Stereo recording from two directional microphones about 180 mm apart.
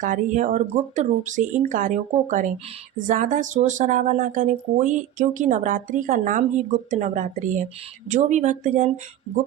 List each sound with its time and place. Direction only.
0.0 s speech: 45° right (ahead or behind)